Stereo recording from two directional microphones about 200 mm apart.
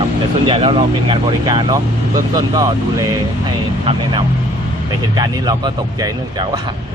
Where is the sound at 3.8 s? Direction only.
25° right (ahead or behind).